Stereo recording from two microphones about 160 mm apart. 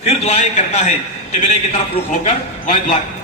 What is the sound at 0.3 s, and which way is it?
Speech, 45° left (ahead or behind).